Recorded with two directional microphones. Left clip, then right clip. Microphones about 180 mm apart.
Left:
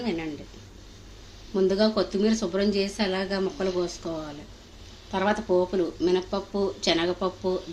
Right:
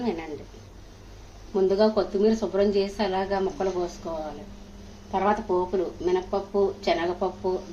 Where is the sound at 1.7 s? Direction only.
45° left (ahead or behind).